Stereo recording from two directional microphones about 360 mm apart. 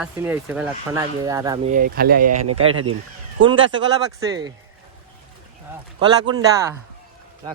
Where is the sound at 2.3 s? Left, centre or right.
Right.